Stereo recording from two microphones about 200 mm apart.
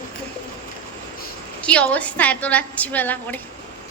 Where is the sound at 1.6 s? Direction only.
5° left (ahead or behind).